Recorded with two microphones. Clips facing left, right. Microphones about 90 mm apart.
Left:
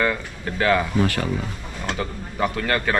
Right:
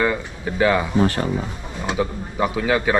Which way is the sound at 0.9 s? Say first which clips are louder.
Right 3 dB; 25° right (ahead or behind).